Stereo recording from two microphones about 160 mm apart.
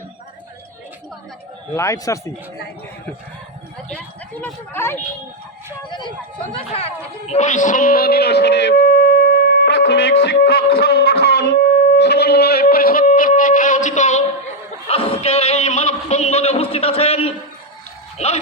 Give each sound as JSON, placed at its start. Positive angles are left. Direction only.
{"t": 1.7, "sound": "a man's voice", "side_deg": 20}
{"t": 3.9, "sound": "speech", "side_deg": 10}
{"t": 5.9, "sound": "speech", "side_deg": 30}
{"t": 14.8, "sound": "speech", "side_deg": 35}